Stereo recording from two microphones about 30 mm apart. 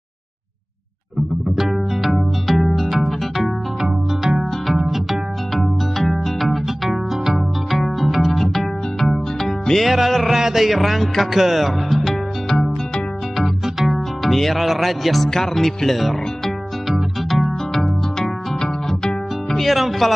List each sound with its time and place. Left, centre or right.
2.0 s music: centre
3.8 s music: centre
5.5 s music: centre
8.0 s music: centre
9.8 s music: centre
11.3 s speech: centre
12.4 s music: centre
13.4 s music: centre
15.2 s music: centre
16.8 s music: centre
18.2 s harp: centre
19.7 s music: centre